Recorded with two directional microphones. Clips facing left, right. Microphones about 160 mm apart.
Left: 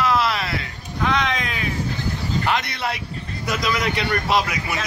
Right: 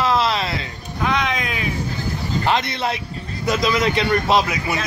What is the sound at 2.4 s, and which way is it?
Speech, 25° right (ahead or behind).